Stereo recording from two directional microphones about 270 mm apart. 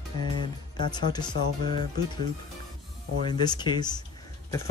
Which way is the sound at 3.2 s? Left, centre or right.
Centre.